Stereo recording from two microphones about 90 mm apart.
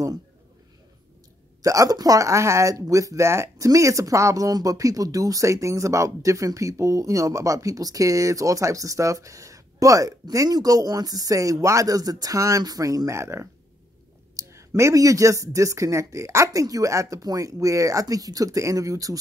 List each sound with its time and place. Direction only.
1.6 s speech: 40° right (ahead or behind)